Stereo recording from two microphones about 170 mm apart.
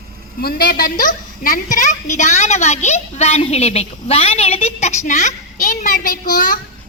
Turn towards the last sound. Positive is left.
turn(degrees=55)  # may be behind; listen again after turning